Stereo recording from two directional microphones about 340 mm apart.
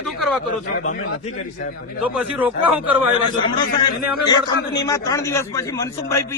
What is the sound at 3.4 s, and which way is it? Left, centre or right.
A man's voice, centre.